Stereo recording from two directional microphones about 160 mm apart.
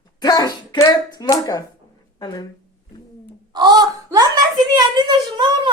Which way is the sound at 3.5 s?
25° right (ahead or behind).